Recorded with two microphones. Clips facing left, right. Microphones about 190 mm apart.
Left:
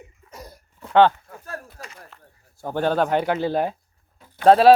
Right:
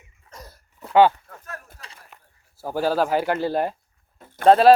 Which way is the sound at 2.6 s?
5° right (ahead or behind).